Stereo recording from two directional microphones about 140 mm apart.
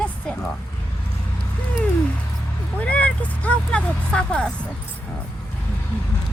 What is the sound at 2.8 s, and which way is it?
Speech, 10° left (ahead or behind).